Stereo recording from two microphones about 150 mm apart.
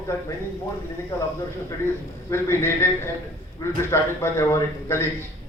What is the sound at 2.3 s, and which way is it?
A man's voice, 15° left (ahead or behind).